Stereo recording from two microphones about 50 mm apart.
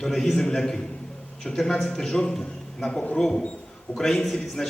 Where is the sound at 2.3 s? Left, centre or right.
Centre.